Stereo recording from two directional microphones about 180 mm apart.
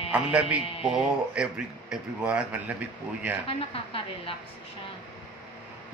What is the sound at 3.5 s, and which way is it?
Speech, 30° left (ahead or behind).